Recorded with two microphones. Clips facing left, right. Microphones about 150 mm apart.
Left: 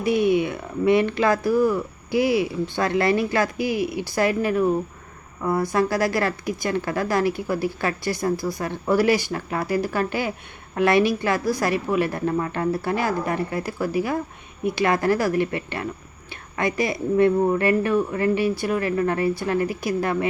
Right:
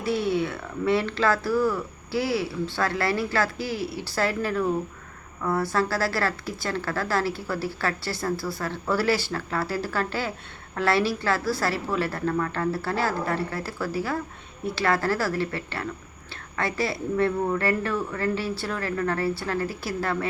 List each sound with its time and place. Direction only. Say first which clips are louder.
0.0 s a woman's voice: left 5 dB; 15° left (ahead or behind)